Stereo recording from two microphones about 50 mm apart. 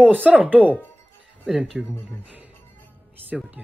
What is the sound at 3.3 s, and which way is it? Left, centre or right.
Speech, centre.